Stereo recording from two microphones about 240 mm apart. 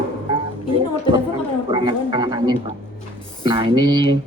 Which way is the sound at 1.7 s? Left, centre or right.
Right.